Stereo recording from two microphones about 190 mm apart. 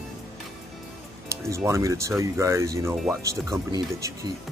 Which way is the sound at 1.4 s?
15° right (ahead or behind).